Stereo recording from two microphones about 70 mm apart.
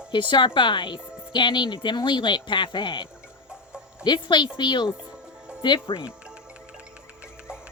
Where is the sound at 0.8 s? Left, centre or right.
Left.